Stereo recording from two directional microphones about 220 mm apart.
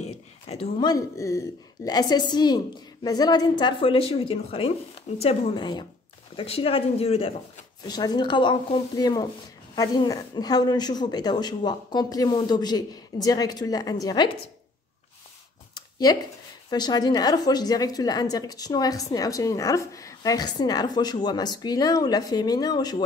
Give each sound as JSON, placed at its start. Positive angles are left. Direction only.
{"t": 0.0, "sound": "a woman's voice", "side_deg": 25}
{"t": 15.7, "sound": "a sound", "side_deg": 20}
{"t": 16.7, "sound": "a woman's voice", "side_deg": 20}